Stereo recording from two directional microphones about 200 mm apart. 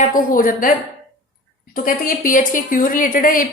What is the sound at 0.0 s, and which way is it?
Speech, 40° left (ahead or behind).